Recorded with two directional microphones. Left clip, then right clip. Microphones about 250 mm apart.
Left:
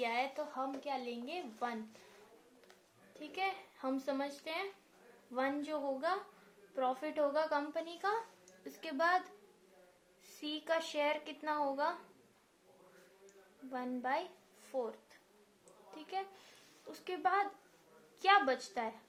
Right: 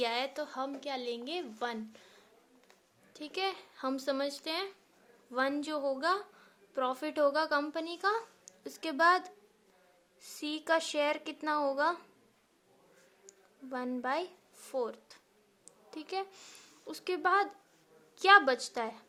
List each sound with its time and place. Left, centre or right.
0.0 s a woman's voice: right
3.2 s a woman's voice: right
10.4 s a woman's voice: right
13.7 s a woman's voice: right
14.7 s a sound: right
16.9 s a woman's voice: right